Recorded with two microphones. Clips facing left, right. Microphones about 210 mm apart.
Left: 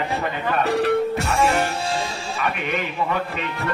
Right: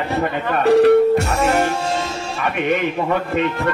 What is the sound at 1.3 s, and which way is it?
Speech, 45° right (ahead or behind).